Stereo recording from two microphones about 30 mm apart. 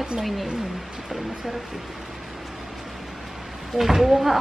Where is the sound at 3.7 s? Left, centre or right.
Centre.